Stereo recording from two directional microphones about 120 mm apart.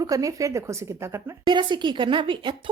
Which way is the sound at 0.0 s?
30° right (ahead or behind).